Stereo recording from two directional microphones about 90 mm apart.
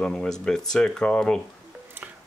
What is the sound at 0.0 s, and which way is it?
Speech, 5° left (ahead or behind).